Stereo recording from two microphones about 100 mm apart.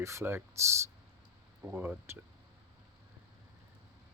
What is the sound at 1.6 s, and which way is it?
Speech, 35° right (ahead or behind).